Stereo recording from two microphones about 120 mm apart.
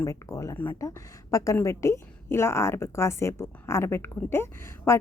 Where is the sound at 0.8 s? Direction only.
25° left (ahead or behind).